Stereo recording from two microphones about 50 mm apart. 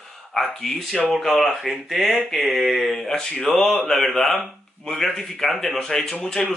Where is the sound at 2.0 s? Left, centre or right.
Right.